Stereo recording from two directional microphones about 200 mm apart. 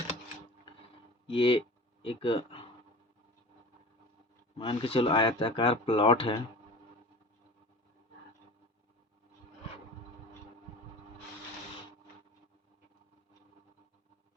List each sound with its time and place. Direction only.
1.3 s speech: 25° left (ahead or behind)
4.5 s speech: 25° left (ahead or behind)